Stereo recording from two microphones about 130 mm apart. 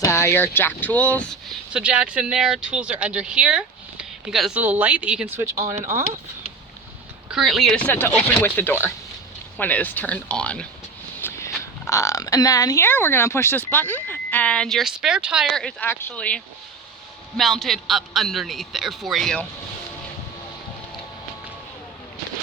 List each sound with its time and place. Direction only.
0.0 s speech: 20° left (ahead or behind)
1.7 s speech: 10° right (ahead or behind)
5.5 s speech: 20° right (ahead or behind)
7.3 s speech: centre (ahead or behind)
7.9 s speech: 15° left (ahead or behind)
11.2 s a sound: 20° left (ahead or behind)
11.9 s speech: 25° left (ahead or behind); by 15.9 s 5° left (ahead or behind)
15.9 s a man's voice: 15° left (ahead or behind)